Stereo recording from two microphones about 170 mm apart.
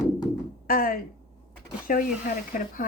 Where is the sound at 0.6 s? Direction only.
55° left (ahead or behind).